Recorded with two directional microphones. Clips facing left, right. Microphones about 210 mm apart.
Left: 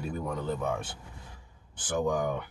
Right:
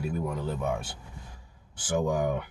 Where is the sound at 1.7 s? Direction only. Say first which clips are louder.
Right 1 dB; 10° right (ahead or behind).